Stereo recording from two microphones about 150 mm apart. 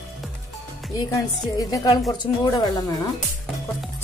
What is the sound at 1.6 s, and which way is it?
Speech, 25° left (ahead or behind).